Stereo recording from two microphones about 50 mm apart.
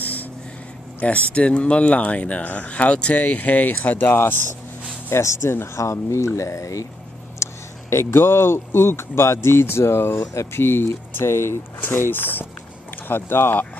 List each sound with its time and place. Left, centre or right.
0.0 s a sound: left
1.0 s speech: left
5.1 s speech: left
5.8 s speech: left
7.4 s a sound: left
7.9 s speech: left
10.3 s speech: left
10.6 s speech: left